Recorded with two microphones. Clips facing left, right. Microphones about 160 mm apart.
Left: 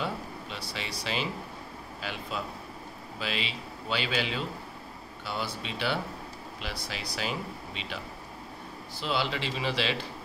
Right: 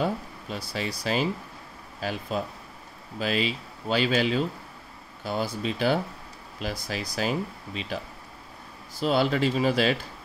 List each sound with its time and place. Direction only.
0.0 s speech: 45° right (ahead or behind)
9.0 s speech: 45° right (ahead or behind)